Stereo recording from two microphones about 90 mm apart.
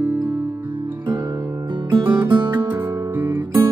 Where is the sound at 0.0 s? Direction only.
25° right (ahead or behind).